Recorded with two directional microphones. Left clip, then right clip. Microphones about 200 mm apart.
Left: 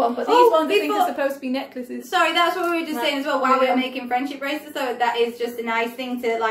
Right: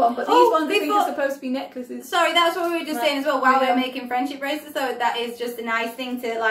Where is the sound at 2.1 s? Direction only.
5° right (ahead or behind).